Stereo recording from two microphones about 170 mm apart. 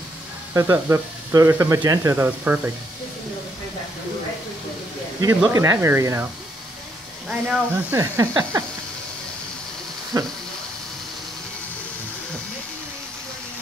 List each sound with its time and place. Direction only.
0.6 s speech: 15° right (ahead or behind)
5.5 s speech: 15° right (ahead or behind)
7.2 s speech: 5° right (ahead or behind)
10.1 s speech: 20° right (ahead or behind)